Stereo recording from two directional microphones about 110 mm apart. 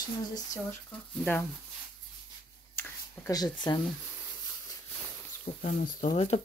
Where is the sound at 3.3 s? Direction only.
40° left (ahead or behind).